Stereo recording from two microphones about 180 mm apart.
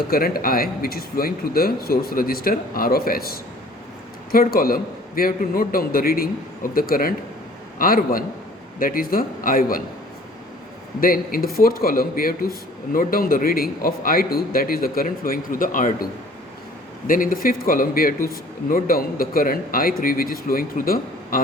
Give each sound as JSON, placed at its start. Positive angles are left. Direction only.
{"t": 0.1, "sound": "a man's voice", "side_deg": 55}
{"t": 11.0, "sound": "a man's voice", "side_deg": 55}
{"t": 17.1, "sound": "a man's voice", "side_deg": 50}